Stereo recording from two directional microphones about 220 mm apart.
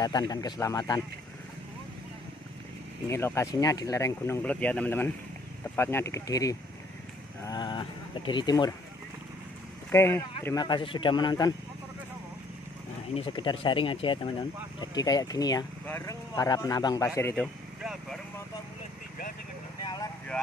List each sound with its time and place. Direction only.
0.0 s speech: 15° left (ahead or behind)
3.1 s speech: 10° left (ahead or behind)
9.8 s speech: 10° left (ahead or behind)
13.1 s speech: 25° left (ahead or behind)
19.8 s vehicle: 20° left (ahead or behind)